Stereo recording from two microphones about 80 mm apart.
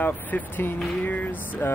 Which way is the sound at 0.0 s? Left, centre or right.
Left.